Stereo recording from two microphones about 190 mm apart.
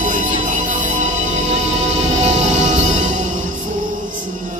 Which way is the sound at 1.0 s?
40° right (ahead or behind).